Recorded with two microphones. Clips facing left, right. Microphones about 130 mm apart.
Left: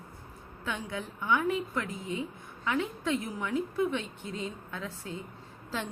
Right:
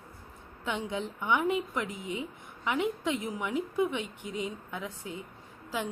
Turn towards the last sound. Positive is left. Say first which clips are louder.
# right 2 dB
turn(degrees=-10)  # may be behind; listen again after turning